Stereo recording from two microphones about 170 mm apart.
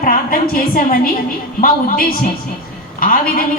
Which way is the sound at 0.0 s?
55° left (ahead or behind).